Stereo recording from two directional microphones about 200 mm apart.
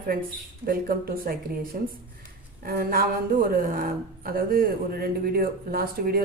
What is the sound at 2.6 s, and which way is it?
A woman's voice, 50° right (ahead or behind).